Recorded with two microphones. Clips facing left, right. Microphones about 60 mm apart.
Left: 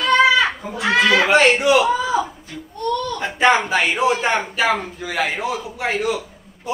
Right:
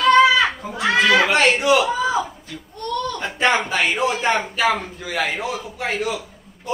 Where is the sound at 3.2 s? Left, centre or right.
Centre.